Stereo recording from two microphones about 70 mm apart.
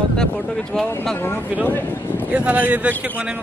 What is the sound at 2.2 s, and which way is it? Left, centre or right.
Speech, centre.